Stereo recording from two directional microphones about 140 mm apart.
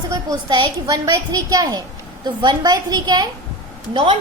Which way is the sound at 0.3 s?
35° right (ahead or behind).